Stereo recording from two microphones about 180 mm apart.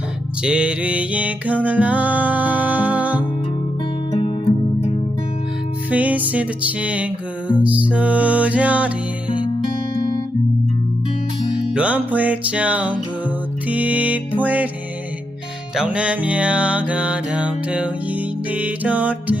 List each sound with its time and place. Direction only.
0.4 s music: 5° right (ahead or behind)
4.1 s music: 30° left (ahead or behind)
5.9 s music: 10° right (ahead or behind)
11.5 s music: 5° right (ahead or behind)
15.7 s music: 5° right (ahead or behind)